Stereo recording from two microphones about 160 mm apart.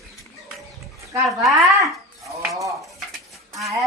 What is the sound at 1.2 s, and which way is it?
Speech, centre (ahead or behind).